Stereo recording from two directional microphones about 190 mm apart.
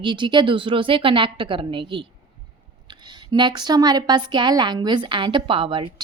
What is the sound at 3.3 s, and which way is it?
Speech, 25° right (ahead or behind).